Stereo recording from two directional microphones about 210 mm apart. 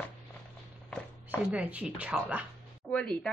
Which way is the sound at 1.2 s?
5° right (ahead or behind).